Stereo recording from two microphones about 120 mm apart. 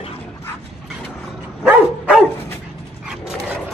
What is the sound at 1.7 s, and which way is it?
Dog, 10° right (ahead or behind).